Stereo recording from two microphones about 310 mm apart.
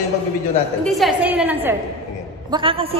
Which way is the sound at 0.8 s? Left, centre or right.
Centre.